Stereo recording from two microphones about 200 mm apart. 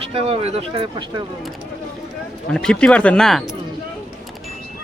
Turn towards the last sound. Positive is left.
turn(degrees=0)  # may be behind; listen again after turning